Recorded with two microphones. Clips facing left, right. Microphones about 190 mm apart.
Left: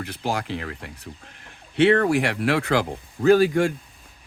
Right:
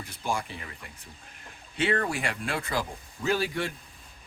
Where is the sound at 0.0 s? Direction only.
70° left (ahead or behind); by 3.7 s 50° left (ahead or behind).